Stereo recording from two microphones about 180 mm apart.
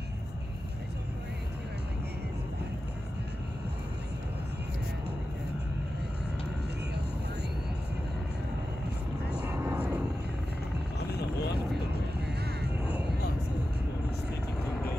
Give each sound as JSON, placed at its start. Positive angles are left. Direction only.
{"t": 9.5, "sound": "vehicle", "side_deg": -15}
{"t": 12.4, "sound": "vehicle", "side_deg": -65}